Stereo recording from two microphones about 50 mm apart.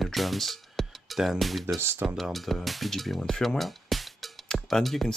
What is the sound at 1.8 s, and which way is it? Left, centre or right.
Speech, right.